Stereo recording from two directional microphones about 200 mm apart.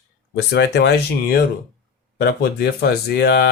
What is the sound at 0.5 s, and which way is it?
Speech, 60° left (ahead or behind).